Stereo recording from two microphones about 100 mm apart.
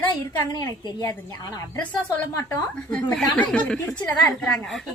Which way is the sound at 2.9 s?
10° left (ahead or behind).